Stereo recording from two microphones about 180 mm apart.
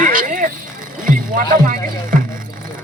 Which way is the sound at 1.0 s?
50° right (ahead or behind).